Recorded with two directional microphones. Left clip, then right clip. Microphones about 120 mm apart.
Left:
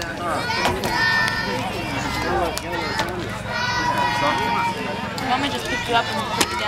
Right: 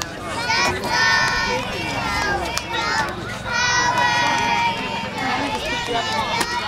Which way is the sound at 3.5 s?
40° right (ahead or behind).